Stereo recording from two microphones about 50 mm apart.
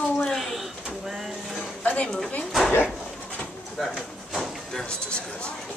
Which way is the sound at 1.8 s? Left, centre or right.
Left.